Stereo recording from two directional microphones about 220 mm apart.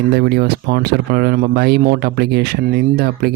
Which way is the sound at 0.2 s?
45° right (ahead or behind).